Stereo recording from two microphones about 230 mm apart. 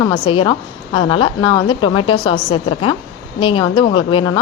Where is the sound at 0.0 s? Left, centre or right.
Left.